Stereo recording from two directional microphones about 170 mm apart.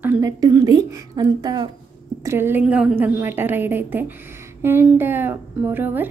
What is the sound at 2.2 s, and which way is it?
A woman's voice, 15° right (ahead or behind).